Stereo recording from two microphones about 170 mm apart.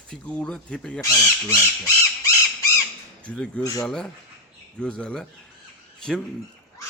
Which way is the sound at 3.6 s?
20° left (ahead or behind).